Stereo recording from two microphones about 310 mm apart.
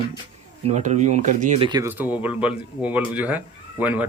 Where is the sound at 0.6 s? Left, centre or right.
Right.